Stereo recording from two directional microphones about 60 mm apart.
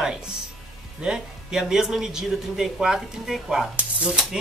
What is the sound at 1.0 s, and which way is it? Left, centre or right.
Speech, centre.